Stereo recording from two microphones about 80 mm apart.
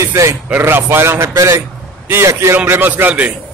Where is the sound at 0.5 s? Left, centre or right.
Right.